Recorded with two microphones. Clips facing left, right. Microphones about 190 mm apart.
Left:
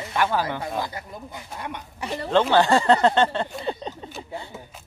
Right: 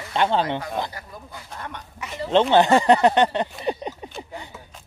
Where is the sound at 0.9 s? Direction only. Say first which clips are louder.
Left 3 dB; 20° left (ahead or behind).